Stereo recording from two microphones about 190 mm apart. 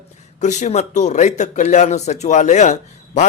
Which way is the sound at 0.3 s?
40° left (ahead or behind).